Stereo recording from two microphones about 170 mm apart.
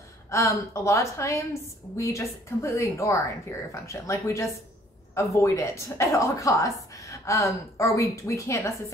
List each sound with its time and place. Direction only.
0.3 s a woman's voice: 15° left (ahead or behind)